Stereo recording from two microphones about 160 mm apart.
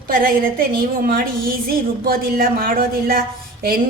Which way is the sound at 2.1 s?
70° right (ahead or behind).